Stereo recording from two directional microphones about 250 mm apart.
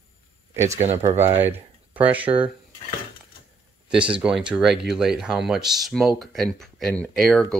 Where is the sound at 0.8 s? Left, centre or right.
Right.